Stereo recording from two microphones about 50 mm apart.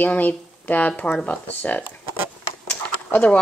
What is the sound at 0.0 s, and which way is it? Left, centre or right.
Speech, left.